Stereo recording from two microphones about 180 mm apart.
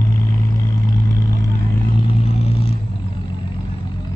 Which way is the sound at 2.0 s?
35° left (ahead or behind).